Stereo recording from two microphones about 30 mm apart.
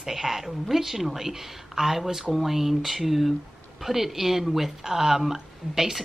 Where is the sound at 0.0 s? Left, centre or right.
Centre.